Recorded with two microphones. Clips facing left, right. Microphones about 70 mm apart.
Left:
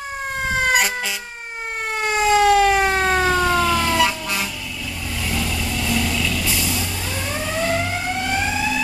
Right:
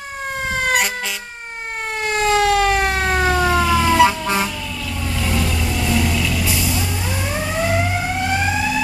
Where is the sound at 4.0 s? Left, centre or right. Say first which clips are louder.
Right 6 dB; right.